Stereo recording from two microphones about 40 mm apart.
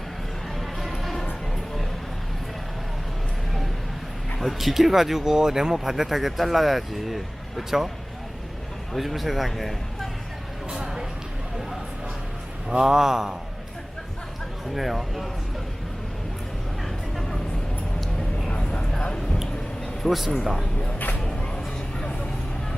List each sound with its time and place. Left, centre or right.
0.8 s music: centre
4.4 s speech: centre
9.0 s a man's voice: centre
10.7 s a sound: centre
12.8 s speech: centre
14.7 s a man's voice: centre
18.5 s a sound: left
20.1 s a man's voice: centre